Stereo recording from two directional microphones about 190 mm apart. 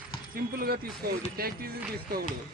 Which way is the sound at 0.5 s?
50° right (ahead or behind).